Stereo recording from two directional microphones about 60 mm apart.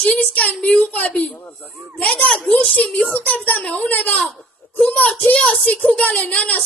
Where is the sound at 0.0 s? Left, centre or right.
Left.